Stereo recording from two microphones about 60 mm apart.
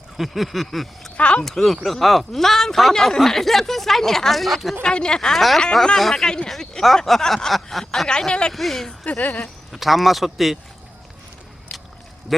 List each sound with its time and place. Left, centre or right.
0.2 s a sound: centre
1.1 s speech: centre
1.5 s speech: centre
4.8 s speech: centre
8.3 s speech: centre
8.5 s speech: centre
9.0 s speech: left
9.7 s speech: centre